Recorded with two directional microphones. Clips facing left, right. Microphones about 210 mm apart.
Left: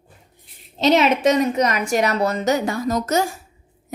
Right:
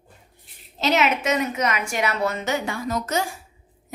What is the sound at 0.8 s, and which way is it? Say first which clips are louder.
A woman's voice: left 6 dB; 30° left (ahead or behind).